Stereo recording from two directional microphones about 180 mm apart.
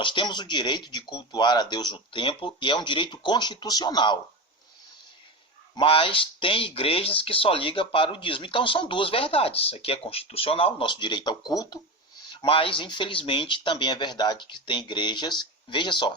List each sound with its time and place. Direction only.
0.0 s speech: 25° left (ahead or behind)
5.7 s speech: 30° left (ahead or behind)